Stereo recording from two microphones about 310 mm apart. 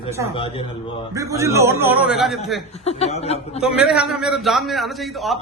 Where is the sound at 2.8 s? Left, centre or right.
Centre.